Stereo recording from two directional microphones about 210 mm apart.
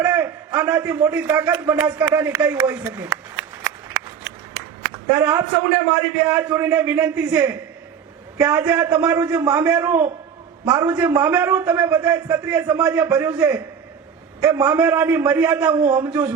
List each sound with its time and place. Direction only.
0.0 s a man's voice: 10° right (ahead or behind)
3.3 s shuffling cards: 10° right (ahead or behind)
6.2 s a man's voice: 10° right (ahead or behind)
13.1 s a man's voice: 15° right (ahead or behind)
14.4 s a man's voice: 10° right (ahead or behind)